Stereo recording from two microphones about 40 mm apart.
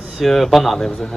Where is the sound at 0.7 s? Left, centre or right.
Centre.